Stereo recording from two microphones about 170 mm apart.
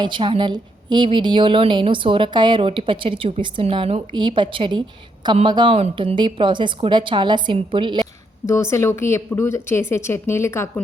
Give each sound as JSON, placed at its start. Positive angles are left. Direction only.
{"t": 0.0, "sound": "a woman's voice", "side_deg": -30}
{"t": 8.4, "sound": "speech", "side_deg": 15}